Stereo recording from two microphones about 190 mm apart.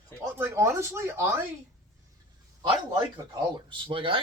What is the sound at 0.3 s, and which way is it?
Speech, 10° right (ahead or behind).